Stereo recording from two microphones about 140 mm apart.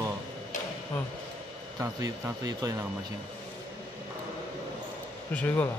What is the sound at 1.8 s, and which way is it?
Speech, 20° right (ahead or behind).